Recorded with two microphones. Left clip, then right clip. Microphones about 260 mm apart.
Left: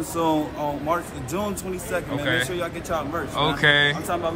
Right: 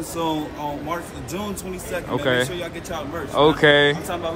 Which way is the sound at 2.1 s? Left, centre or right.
Centre.